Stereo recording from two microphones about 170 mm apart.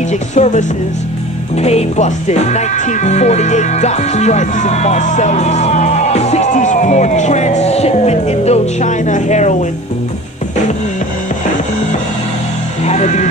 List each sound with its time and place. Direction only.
0.1 s speech: 45° left (ahead or behind)
12.8 s music: 40° left (ahead or behind)